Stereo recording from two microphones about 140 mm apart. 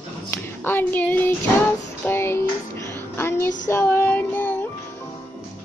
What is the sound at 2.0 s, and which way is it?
Music, 20° left (ahead or behind).